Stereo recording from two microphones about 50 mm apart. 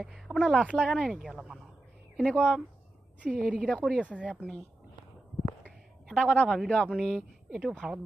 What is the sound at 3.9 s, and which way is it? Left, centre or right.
Speech, left.